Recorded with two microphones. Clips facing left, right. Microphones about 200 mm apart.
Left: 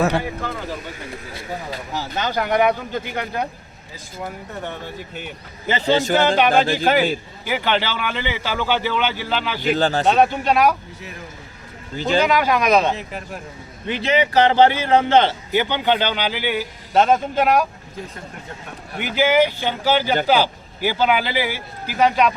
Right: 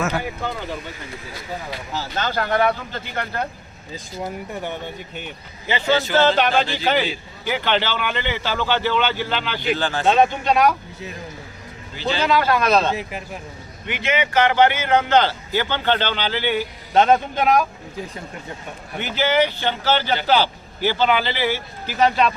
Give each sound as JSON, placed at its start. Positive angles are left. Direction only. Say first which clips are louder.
{"t": 1.9, "sound": "a man's voice", "louder": "left 1 dB", "side_deg": 15}
{"t": 5.6, "sound": "a man's voice", "louder": "left 2 dB", "side_deg": 45}
{"t": 6.1, "sound": "a man's voice", "louder": "right 2 dB", "side_deg": 15}
{"t": 6.5, "sound": "a man's voice", "louder": "left 4 dB", "side_deg": 50}
{"t": 7.4, "sound": "a man's voice", "louder": "even", "side_deg": 5}
{"t": 9.6, "sound": "speech", "louder": "left 5 dB", "side_deg": 40}
{"t": 10.2, "sound": "a man's voice", "louder": "right 1 dB", "side_deg": 5}
{"t": 11.9, "sound": "a man's voice", "louder": "left 5 dB", "side_deg": 45}
{"t": 12.2, "sound": "a man's voice", "louder": "right 2 dB", "side_deg": 15}
{"t": 13.8, "sound": "a man's voice", "louder": "left 4 dB", "side_deg": 35}
{"t": 18.9, "sound": "a man's voice", "louder": "left 3 dB", "side_deg": 10}